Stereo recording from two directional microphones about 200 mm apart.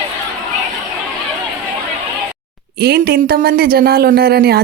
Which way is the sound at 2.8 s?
55° right (ahead or behind).